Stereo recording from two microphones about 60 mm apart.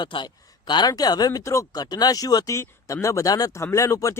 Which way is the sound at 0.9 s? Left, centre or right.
Left.